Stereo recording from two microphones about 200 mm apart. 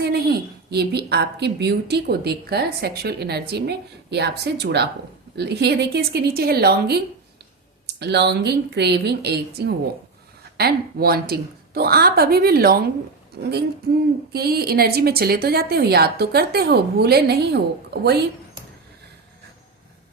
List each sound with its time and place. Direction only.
0.0 s a woman's voice: 55° right (ahead or behind)